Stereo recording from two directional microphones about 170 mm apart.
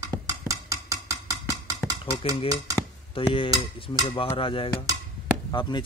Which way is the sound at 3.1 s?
30° left (ahead or behind).